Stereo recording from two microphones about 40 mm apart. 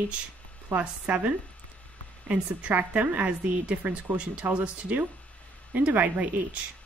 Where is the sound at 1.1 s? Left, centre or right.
Right.